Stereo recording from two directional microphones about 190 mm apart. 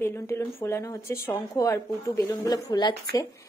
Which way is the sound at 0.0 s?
15° left (ahead or behind).